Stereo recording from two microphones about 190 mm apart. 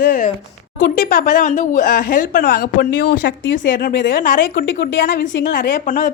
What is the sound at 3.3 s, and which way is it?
Speech, 75° left (ahead or behind).